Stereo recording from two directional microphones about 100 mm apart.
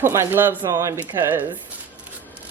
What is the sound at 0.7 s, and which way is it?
Speech, 30° right (ahead or behind).